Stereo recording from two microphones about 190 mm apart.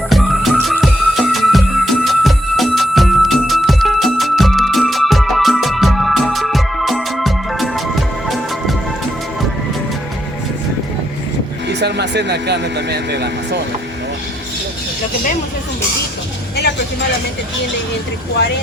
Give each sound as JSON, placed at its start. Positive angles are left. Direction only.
{"t": 0.1, "sound": "music", "side_deg": 0}
{"t": 11.7, "sound": "speech", "side_deg": -65}
{"t": 16.6, "sound": "vehicle", "side_deg": 60}